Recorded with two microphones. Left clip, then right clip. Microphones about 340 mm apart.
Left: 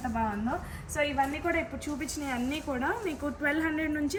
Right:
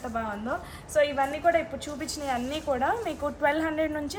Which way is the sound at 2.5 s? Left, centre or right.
Right.